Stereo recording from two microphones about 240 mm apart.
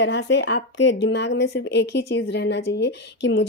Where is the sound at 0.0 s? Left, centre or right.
Left.